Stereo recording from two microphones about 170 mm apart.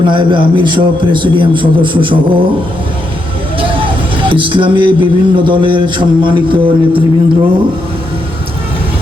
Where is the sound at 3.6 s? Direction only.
30° right (ahead or behind).